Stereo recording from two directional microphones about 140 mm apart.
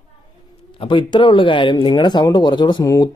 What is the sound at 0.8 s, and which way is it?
Speech, 35° left (ahead or behind).